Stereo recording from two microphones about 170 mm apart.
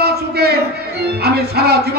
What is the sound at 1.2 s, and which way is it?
Music, 70° right (ahead or behind).